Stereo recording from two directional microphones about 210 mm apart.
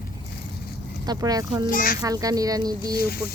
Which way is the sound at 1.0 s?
20° right (ahead or behind).